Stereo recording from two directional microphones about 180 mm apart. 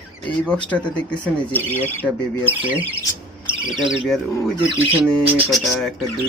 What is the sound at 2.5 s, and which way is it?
Speech, 10° right (ahead or behind).